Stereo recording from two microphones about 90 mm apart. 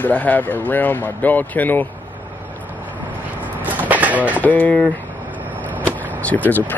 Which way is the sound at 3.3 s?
20° right (ahead or behind).